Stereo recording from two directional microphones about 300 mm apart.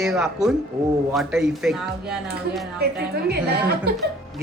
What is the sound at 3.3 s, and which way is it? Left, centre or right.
Speech, right.